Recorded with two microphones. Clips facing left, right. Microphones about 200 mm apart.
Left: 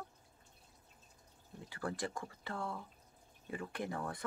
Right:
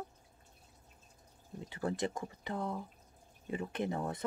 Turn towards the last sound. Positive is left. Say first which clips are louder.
# right 5 dB
turn(degrees=-20)  # may be behind; listen again after turning